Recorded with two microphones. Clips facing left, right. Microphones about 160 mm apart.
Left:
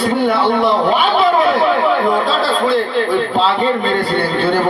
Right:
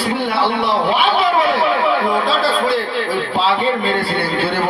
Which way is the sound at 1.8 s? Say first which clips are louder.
Left 2 dB; 5° right (ahead or behind).